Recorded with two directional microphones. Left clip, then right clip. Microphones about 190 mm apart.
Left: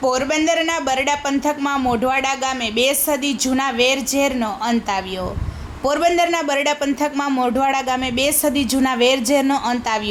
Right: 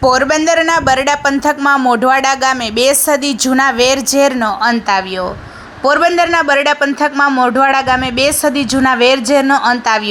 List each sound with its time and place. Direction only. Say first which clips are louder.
0.0 s a man's voice: right 7 dB; 25° right (ahead or behind)